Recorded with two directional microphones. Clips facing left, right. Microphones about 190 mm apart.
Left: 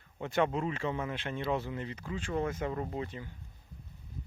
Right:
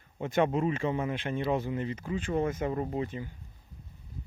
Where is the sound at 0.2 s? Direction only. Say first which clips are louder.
Right 3 dB; 20° right (ahead or behind).